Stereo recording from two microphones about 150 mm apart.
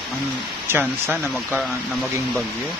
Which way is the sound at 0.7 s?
15° right (ahead or behind).